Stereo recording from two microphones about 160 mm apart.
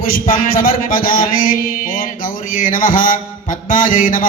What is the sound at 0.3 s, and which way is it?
Mantra, 60° left (ahead or behind).